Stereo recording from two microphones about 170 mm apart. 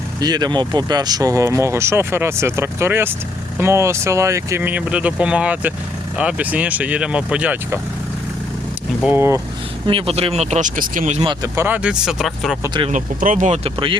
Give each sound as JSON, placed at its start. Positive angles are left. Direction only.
{"t": 0.2, "sound": "speech", "side_deg": -25}
{"t": 9.0, "sound": "speech", "side_deg": -15}
{"t": 9.8, "sound": "speech", "side_deg": -35}
{"t": 11.3, "sound": "speech", "side_deg": -20}
{"t": 12.6, "sound": "speech", "side_deg": -25}
{"t": 12.9, "sound": "speech", "side_deg": -50}